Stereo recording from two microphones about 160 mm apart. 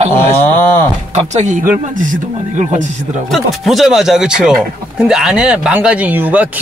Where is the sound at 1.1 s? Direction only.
45° right (ahead or behind).